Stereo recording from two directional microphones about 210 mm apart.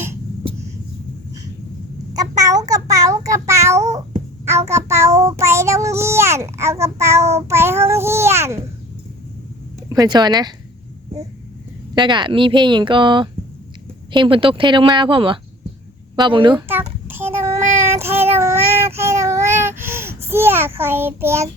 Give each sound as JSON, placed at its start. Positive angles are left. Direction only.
{"t": 2.1, "sound": "child singing", "side_deg": -15}
{"t": 7.4, "sound": "a child's voice", "side_deg": -10}
{"t": 9.9, "sound": "speech", "side_deg": -20}
{"t": 11.9, "sound": "speech", "side_deg": -20}
{"t": 17.1, "sound": "child singing", "side_deg": -10}
{"t": 18.9, "sound": "a sound", "side_deg": -15}